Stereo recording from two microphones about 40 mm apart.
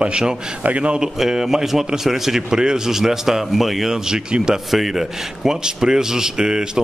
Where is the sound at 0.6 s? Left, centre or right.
Right.